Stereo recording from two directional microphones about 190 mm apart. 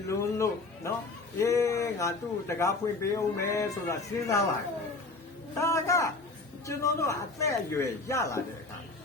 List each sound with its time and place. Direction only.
0.1 s speech: 15° left (ahead or behind)
5.5 s speech: 15° left (ahead or behind)